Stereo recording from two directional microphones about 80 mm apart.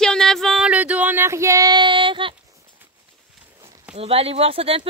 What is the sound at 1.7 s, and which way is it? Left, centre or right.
Child singing, right.